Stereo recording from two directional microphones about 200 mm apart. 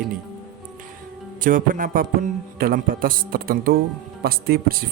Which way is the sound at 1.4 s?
45° right (ahead or behind).